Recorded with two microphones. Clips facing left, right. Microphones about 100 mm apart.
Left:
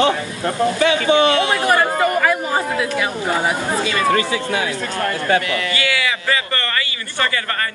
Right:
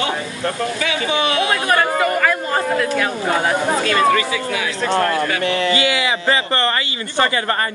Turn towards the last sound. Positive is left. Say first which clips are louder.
# right 4 dB
turn(degrees=-25)  # may be behind; listen again after turning